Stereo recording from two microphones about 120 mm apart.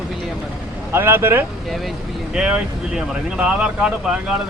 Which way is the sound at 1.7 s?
Centre (ahead or behind).